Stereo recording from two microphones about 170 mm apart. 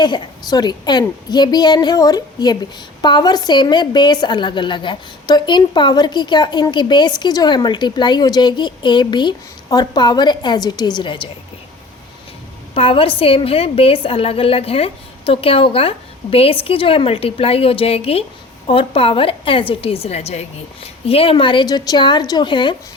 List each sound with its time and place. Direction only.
0.0 s a woman's voice: 25° left (ahead or behind)
12.7 s a woman's voice: 35° left (ahead or behind)